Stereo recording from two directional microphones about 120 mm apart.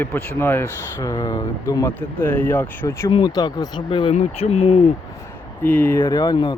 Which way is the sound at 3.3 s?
30° left (ahead or behind).